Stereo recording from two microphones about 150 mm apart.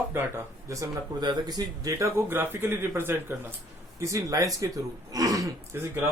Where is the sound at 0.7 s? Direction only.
25° right (ahead or behind).